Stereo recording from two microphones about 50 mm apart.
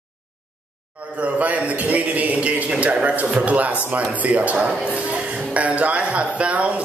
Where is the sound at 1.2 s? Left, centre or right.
Right.